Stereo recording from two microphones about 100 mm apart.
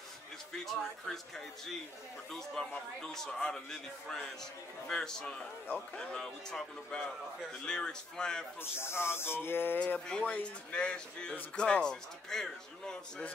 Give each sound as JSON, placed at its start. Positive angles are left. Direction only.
{"t": 0.5, "sound": "speech", "side_deg": 5}
{"t": 8.5, "sound": "speech", "side_deg": 25}
{"t": 9.9, "sound": "speech", "side_deg": 10}